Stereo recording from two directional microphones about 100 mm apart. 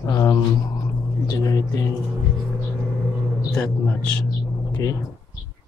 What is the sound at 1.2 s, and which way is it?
Speech, 40° left (ahead or behind).